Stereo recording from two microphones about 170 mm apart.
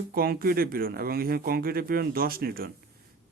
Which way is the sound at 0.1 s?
60° right (ahead or behind).